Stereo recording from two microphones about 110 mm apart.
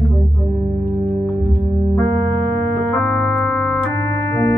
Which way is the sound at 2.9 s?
10° left (ahead or behind).